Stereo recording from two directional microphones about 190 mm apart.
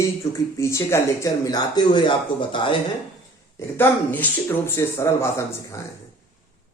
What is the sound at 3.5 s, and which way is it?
Speech, 10° left (ahead or behind).